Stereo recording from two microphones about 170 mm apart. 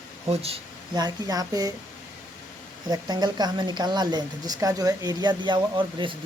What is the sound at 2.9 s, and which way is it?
Speech, 25° right (ahead or behind).